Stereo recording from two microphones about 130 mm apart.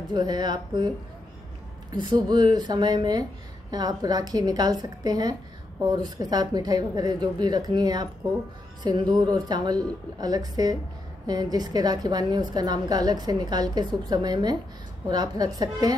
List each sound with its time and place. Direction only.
0.1 s a woman's voice: 30° right (ahead or behind)